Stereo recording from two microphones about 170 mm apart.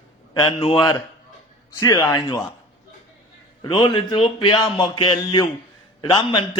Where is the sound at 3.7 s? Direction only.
30° left (ahead or behind).